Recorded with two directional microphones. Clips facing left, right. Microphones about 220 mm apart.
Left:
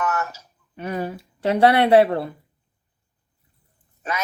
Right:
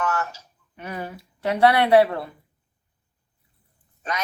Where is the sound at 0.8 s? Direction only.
30° left (ahead or behind).